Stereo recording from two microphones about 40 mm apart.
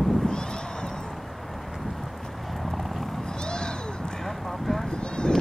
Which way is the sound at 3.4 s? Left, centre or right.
Left.